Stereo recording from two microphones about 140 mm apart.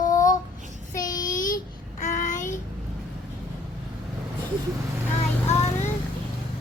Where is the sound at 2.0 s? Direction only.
60° left (ahead or behind).